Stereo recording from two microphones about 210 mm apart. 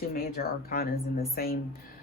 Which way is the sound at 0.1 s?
45° left (ahead or behind).